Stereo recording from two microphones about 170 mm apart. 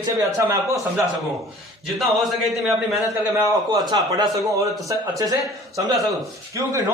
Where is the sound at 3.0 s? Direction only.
20° right (ahead or behind).